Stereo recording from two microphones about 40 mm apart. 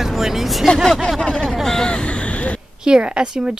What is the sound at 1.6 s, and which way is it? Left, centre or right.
Speech, centre.